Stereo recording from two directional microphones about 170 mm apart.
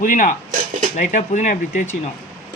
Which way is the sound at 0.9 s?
45° left (ahead or behind).